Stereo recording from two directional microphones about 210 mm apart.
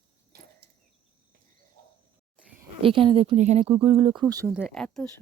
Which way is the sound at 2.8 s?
25° right (ahead or behind).